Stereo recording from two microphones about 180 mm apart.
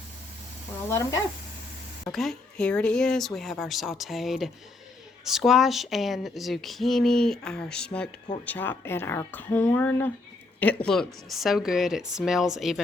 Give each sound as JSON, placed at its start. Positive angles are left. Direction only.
{"t": 0.9, "sound": "speech", "side_deg": 15}
{"t": 2.0, "sound": "speech", "side_deg": 0}